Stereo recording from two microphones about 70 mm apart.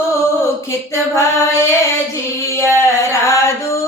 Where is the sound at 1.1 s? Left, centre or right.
Left.